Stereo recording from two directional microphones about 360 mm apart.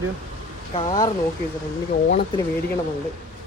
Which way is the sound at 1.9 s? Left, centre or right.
Left.